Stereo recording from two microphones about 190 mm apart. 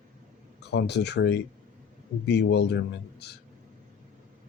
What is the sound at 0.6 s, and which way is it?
Speech, 60° left (ahead or behind).